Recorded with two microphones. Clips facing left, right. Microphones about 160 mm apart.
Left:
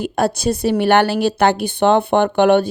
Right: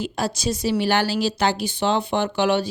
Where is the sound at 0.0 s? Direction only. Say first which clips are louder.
Left 7 dB; 55° left (ahead or behind).